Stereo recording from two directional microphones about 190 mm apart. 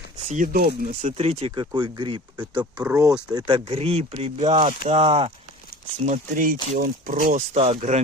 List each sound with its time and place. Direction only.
0.3 s speech: 45° right (ahead or behind); by 2.5 s 25° right (ahead or behind)
2.6 s speech: 10° right (ahead or behind)
3.0 s speech: 20° right (ahead or behind)
6.1 s speech: 45° right (ahead or behind)